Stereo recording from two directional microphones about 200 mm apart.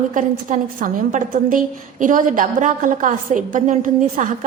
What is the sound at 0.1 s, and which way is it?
A woman's voice, 40° right (ahead or behind).